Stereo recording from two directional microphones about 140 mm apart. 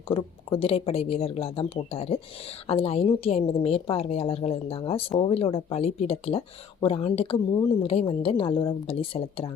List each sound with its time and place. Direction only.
0.5 s a woman's voice: 40° left (ahead or behind)